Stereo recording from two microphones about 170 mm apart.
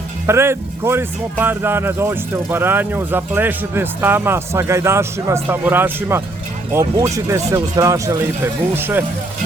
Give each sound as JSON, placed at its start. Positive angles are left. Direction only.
{"t": 0.3, "sound": "speech", "side_deg": -15}